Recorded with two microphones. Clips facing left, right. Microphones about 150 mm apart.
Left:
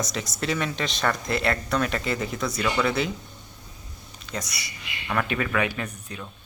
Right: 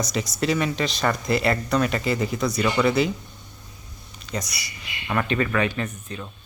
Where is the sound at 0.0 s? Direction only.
Centre (ahead or behind).